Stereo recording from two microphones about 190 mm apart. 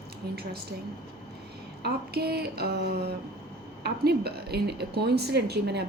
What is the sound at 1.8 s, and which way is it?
A woman's voice, 55° right (ahead or behind).